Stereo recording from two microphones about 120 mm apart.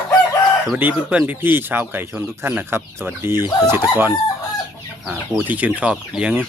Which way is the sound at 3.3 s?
35° left (ahead or behind).